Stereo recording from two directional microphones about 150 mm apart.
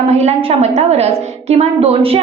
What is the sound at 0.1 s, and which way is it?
A woman's voice, 45° right (ahead or behind).